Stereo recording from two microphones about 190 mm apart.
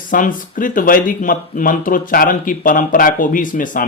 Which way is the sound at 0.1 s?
45° left (ahead or behind).